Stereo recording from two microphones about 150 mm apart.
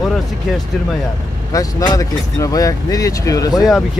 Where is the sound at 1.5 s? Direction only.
25° left (ahead or behind).